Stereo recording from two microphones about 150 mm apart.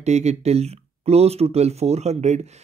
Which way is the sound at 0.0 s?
45° right (ahead or behind).